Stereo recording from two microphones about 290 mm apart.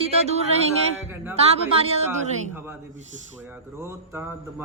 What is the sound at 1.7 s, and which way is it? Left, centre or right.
Speech, centre.